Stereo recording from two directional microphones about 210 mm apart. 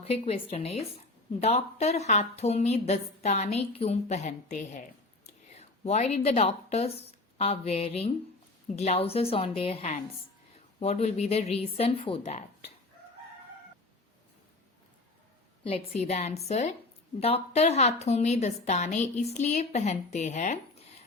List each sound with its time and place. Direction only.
0.0 s a woman's voice: 30° left (ahead or behind)
15.6 s a woman's voice: 30° left (ahead or behind)